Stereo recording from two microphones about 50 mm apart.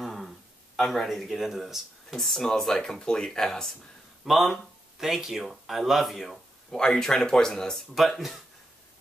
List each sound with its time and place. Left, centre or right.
0.0 s a sound: centre
0.7 s speech: centre
2.1 s speech: centre
4.2 s speech: centre
7.9 s speech: centre